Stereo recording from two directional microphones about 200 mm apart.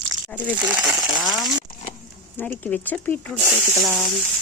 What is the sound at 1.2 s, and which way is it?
Speech, centre (ahead or behind).